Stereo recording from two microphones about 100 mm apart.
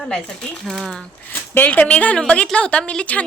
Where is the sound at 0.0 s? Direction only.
10° left (ahead or behind).